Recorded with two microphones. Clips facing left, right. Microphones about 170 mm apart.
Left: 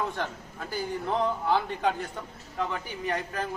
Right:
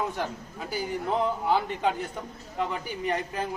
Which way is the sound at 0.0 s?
10° right (ahead or behind).